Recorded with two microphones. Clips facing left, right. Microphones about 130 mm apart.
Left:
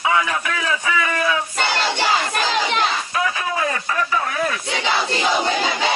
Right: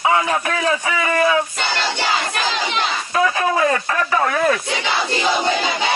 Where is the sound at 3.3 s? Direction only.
50° right (ahead or behind).